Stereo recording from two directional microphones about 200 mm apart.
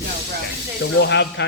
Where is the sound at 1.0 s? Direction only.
60° left (ahead or behind).